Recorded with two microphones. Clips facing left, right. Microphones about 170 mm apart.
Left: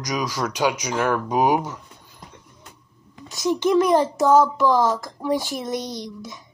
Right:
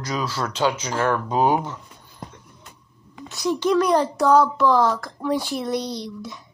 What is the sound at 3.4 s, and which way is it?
A child's voice, 20° left (ahead or behind).